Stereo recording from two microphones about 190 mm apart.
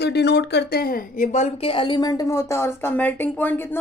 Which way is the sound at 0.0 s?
60° left (ahead or behind).